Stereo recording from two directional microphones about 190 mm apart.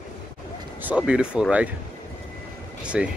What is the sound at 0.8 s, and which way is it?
Speech, 5° right (ahead or behind).